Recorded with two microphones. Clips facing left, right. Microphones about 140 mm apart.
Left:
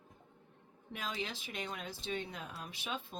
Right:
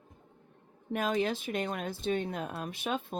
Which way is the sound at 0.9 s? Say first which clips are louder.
Right 12 dB; 50° right (ahead or behind).